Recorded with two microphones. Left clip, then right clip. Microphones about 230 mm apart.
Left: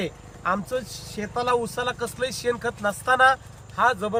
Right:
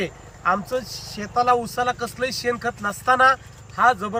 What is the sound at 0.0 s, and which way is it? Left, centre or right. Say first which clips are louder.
A man's voice: right 4 dB; centre.